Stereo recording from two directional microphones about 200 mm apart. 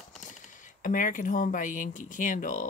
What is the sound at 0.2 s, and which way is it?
Speech, 40° left (ahead or behind).